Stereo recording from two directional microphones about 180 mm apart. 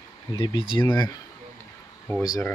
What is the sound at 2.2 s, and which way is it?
Speech, 20° left (ahead or behind).